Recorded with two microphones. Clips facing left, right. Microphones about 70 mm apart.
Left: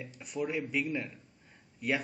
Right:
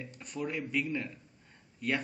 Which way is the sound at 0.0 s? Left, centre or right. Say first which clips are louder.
Left 2 dB; centre.